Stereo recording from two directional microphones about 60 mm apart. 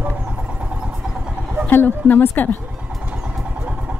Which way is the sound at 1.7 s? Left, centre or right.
Left.